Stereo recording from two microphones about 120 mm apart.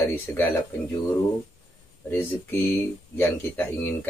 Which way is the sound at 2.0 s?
15° left (ahead or behind).